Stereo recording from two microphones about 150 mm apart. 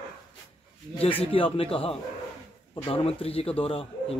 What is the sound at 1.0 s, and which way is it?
Speech, 35° left (ahead or behind).